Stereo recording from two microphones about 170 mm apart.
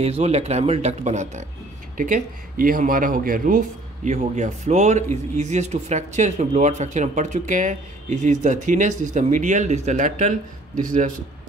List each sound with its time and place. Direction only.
0.0 s speech: 40° right (ahead or behind)